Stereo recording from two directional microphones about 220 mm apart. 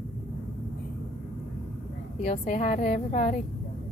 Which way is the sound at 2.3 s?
35° left (ahead or behind).